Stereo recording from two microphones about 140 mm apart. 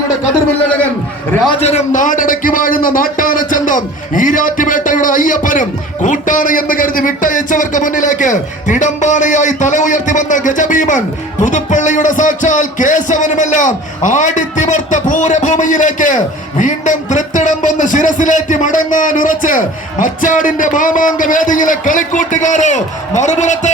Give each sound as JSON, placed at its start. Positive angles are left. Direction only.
{"t": 1.6, "sound": "a man's voice", "side_deg": 60}